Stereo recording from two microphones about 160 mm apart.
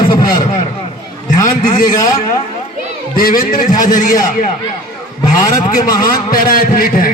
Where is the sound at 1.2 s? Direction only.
55° left (ahead or behind).